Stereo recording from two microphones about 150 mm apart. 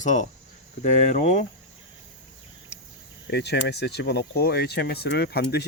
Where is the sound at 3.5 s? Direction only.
90° left.